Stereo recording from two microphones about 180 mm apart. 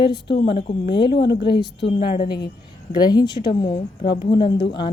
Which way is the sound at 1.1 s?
75° left (ahead or behind).